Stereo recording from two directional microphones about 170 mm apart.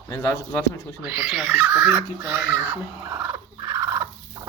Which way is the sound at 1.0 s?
5° right (ahead or behind).